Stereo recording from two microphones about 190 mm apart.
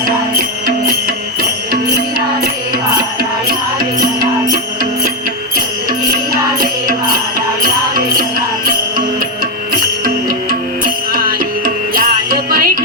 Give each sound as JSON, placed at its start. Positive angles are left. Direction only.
{"t": 1.0, "sound": "music", "side_deg": -50}
{"t": 4.5, "sound": "music", "side_deg": -50}
{"t": 7.3, "sound": "music", "side_deg": -50}
{"t": 11.1, "sound": "music", "side_deg": -50}